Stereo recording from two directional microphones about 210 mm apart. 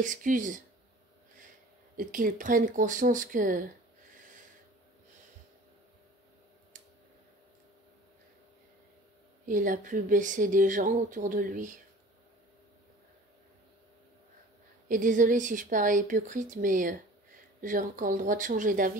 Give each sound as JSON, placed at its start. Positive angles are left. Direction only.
{"t": 0.0, "sound": "speech", "side_deg": -40}
{"t": 2.0, "sound": "speech", "side_deg": -40}
{"t": 9.5, "sound": "speech", "side_deg": -40}
{"t": 14.9, "sound": "speech", "side_deg": -40}